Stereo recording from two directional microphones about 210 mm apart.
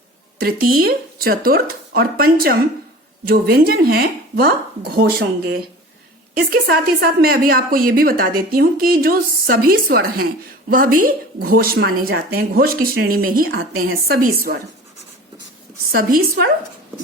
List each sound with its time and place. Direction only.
0.3 s a woman's voice: 45° right (ahead or behind)
15.9 s a woman's voice: 40° right (ahead or behind)